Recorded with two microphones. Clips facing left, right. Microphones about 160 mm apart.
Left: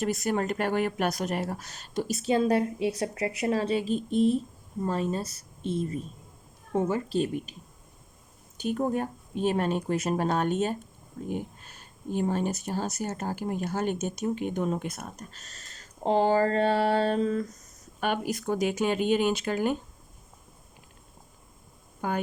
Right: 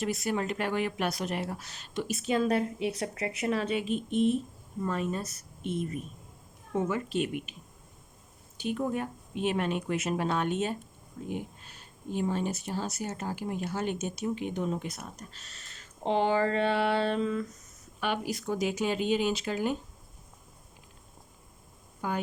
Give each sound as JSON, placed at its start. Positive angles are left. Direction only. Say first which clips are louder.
{"t": 0.0, "sound": "speech", "louder": "left 3 dB", "side_deg": 45}
{"t": 8.5, "sound": "speech", "louder": "left 3 dB", "side_deg": 45}
{"t": 22.0, "sound": "speech", "louder": "left 3 dB", "side_deg": 55}